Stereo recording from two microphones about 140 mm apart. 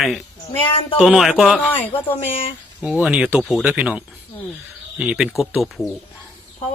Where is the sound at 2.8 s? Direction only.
10° right (ahead or behind).